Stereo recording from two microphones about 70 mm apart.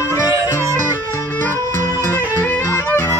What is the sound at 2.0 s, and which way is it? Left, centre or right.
Music, left.